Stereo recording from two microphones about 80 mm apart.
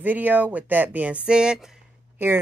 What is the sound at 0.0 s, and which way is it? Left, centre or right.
Speech, right.